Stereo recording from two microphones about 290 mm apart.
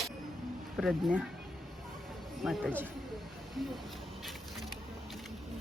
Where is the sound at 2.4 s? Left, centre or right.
Centre.